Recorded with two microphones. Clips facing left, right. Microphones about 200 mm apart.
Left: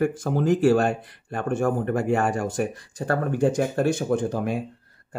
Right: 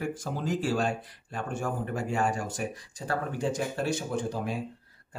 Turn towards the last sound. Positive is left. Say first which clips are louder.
# left 7 dB
turn(degrees=55)  # may be behind; listen again after turning